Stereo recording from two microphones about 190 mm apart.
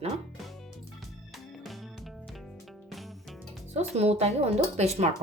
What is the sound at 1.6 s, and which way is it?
Music, centre (ahead or behind).